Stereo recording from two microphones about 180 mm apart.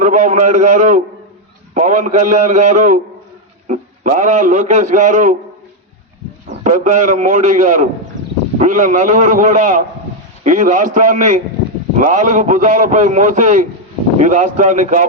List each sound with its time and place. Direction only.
0.0 s a man's voice: 45° right (ahead or behind)
6.6 s a man's voice: 45° right (ahead or behind)